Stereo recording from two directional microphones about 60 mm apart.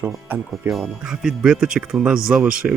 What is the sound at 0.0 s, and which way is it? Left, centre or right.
Speech, right.